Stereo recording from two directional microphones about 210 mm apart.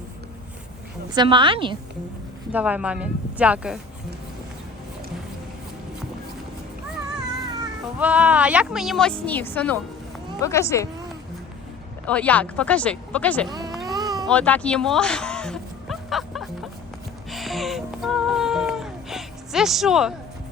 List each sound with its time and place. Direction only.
1.1 s a woman's voice: 20° right (ahead or behind)
2.5 s speech: 5° right (ahead or behind)
7.9 s a woman's voice: 5° right (ahead or behind); by 10.8 s 15° left (ahead or behind)
12.0 s speech: 5° left (ahead or behind)
13.5 s a sound: 20° right (ahead or behind)
13.9 s baby cry: 20° right (ahead or behind)
14.3 s a sound: 5° left (ahead or behind)
17.2 s music: centre (ahead or behind)